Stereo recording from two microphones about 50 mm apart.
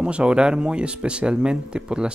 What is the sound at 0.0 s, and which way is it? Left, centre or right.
Speech, right.